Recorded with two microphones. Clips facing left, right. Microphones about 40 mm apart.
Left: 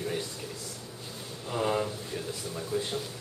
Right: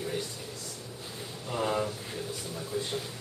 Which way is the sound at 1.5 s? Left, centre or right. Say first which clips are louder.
Left 1 dB; centre.